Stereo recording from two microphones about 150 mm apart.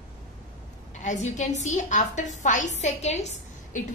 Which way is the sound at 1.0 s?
55° left (ahead or behind).